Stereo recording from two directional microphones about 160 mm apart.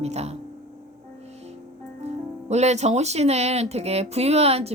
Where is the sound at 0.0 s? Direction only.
40° right (ahead or behind).